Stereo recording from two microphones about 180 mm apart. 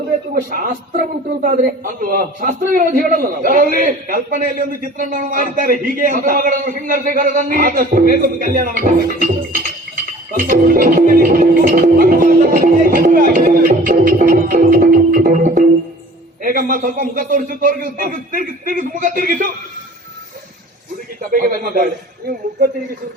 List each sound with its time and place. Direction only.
0.3 s a man's voice: 50° right (ahead or behind)
21.2 s a man's voice: 50° right (ahead or behind)